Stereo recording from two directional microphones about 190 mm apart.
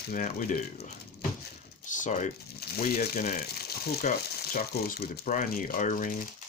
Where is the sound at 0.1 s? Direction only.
45° left (ahead or behind).